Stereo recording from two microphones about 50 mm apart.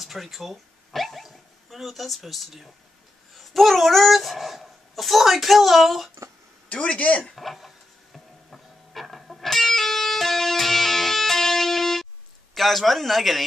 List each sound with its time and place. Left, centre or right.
0.0 s dog: centre
3.3 s speech: centre
6.7 s speech: left
7.3 s printer: centre
12.5 s speech: centre